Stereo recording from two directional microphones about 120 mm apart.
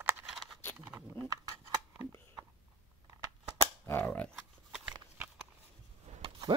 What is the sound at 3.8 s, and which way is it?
Cap gun, 15° left (ahead or behind).